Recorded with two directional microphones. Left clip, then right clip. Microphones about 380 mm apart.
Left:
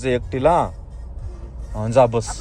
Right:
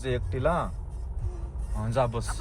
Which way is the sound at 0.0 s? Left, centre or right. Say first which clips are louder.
Left 10 dB; left.